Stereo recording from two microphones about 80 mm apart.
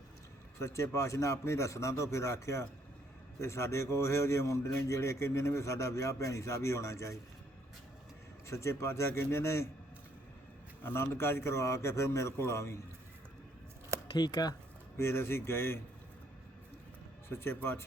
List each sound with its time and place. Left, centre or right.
0.6 s speech: left
8.4 s speech: left
10.8 s speech: left
14.1 s speech: left
14.9 s speech: left
17.2 s speech: left